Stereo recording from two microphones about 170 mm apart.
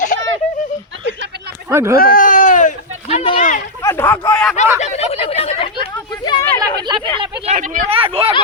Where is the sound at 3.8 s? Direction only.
15° left (ahead or behind).